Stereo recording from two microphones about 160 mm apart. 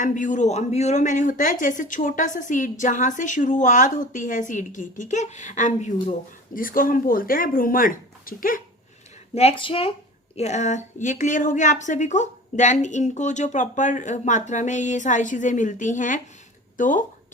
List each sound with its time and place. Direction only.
0.0 s speech: 50° left (ahead or behind)
9.3 s speech: 40° left (ahead or behind)
10.3 s speech: 45° left (ahead or behind)